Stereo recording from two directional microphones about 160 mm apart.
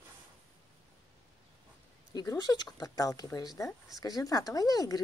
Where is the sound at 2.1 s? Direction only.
25° left (ahead or behind).